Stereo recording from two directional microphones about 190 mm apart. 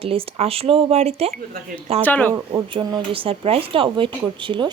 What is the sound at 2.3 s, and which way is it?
Speech, 25° right (ahead or behind).